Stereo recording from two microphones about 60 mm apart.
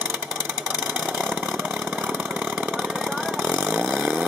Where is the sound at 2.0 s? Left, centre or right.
Centre.